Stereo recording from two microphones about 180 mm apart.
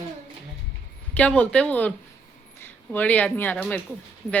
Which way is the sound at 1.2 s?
5° left (ahead or behind).